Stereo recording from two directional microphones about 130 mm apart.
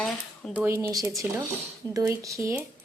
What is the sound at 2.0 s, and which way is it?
Speech, 25° right (ahead or behind).